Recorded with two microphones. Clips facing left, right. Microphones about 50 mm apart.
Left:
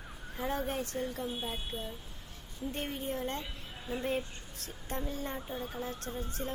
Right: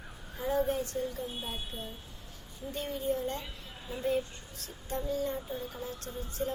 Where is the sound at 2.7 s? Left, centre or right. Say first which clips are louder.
Right 5 dB; left.